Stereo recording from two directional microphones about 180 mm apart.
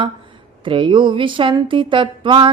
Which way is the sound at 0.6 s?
25° right (ahead or behind).